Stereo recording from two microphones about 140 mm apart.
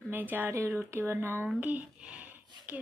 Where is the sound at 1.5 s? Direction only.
10° right (ahead or behind).